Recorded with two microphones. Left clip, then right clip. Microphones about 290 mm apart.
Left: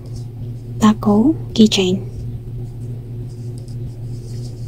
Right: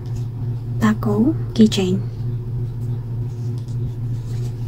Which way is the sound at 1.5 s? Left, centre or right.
Centre.